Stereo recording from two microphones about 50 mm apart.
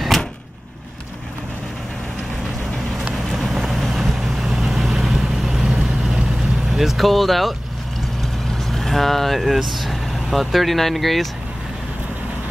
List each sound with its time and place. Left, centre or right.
3.3 s vehicle: centre
6.7 s speech: centre